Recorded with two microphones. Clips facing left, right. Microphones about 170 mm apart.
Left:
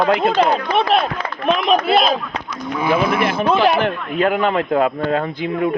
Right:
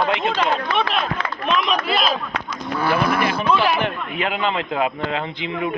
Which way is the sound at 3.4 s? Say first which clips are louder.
Left 5 dB; 45° left (ahead or behind).